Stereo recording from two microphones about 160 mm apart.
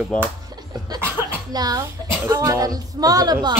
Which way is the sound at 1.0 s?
20° right (ahead or behind).